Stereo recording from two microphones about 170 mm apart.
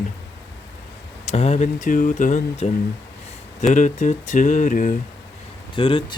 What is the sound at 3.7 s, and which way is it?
Speech, 45° left (ahead or behind).